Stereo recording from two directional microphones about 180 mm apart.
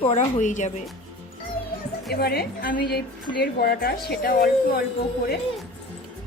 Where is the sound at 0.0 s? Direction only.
35° left (ahead or behind).